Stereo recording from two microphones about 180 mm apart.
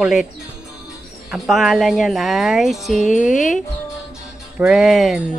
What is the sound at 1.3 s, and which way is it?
Speech, 5° right (ahead or behind).